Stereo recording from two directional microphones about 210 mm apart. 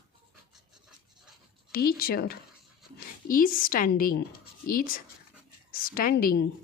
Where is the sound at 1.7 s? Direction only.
45° left (ahead or behind).